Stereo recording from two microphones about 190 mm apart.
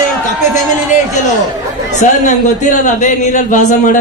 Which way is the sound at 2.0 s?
40° left (ahead or behind).